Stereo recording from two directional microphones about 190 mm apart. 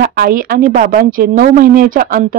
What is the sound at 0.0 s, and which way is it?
A woman's voice, 50° right (ahead or behind).